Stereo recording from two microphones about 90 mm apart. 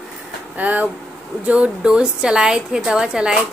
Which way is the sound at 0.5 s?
15° right (ahead or behind).